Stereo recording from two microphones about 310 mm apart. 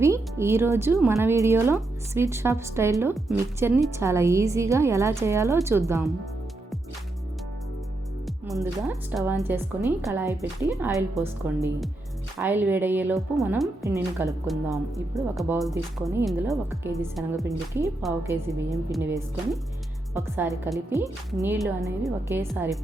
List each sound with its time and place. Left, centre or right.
0.0 s speech: centre
8.5 s speech: centre